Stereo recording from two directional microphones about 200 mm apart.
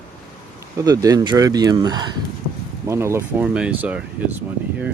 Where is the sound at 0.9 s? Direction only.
15° right (ahead or behind).